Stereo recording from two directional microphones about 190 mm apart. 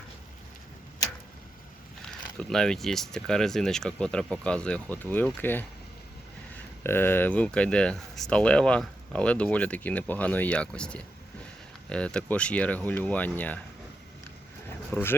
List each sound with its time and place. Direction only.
2.4 s speech: 5° left (ahead or behind)
6.8 s speech: 10° left (ahead or behind)